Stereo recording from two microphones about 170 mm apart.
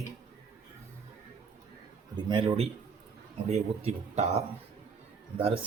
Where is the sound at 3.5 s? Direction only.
40° right (ahead or behind).